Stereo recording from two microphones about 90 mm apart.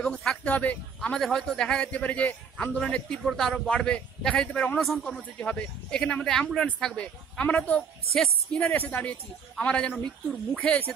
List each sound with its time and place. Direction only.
0.0 s a man's voice: 10° left (ahead or behind)
1.2 s a man's voice: centre (ahead or behind)
5.0 s a man's voice: 10° left (ahead or behind)
9.9 s speech: centre (ahead or behind)
10.6 s a man's voice: 15° left (ahead or behind)